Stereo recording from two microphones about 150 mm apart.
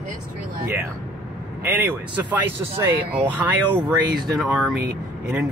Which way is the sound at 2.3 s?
15° right (ahead or behind).